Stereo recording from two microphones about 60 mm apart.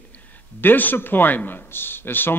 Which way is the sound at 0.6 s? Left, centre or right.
Left.